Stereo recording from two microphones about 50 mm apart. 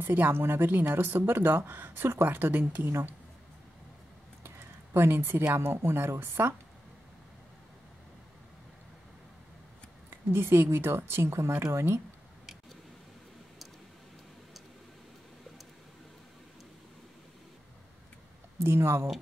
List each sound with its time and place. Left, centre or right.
0.0 s speech: right
4.4 s speech: right
10.3 s a woman's voice: right
18.6 s a woman's voice: right